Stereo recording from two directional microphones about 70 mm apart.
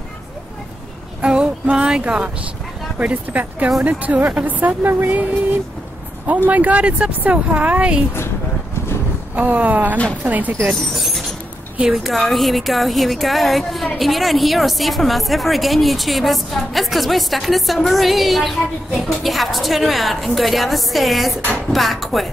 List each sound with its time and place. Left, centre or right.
1.2 s a sound: centre
3.0 s speech: right
9.3 s speech: right
10.7 s a woman's voice: centre